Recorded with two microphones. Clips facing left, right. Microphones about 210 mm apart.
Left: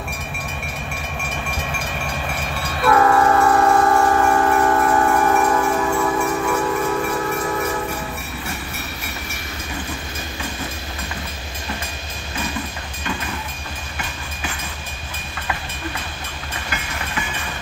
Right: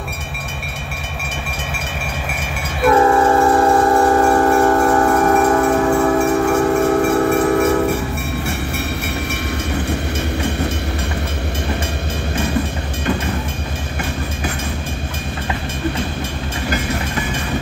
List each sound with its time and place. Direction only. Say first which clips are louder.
2.8 s train: right 3 dB; 25° right (ahead or behind); by 7.0 s 50° right (ahead or behind)
7.0 s music: right 8 dB; 70° right (ahead or behind)